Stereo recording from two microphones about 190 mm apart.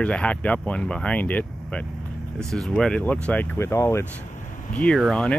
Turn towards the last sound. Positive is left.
turn(degrees=5)  # may be behind; listen again after turning